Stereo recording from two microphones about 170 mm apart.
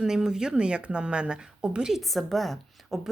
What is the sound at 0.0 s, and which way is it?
Speech, 5° right (ahead or behind).